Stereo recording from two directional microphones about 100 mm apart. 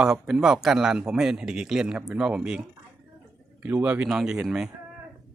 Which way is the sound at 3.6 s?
15° right (ahead or behind).